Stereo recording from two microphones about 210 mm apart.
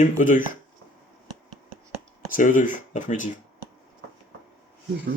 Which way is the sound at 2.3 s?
40° left (ahead or behind).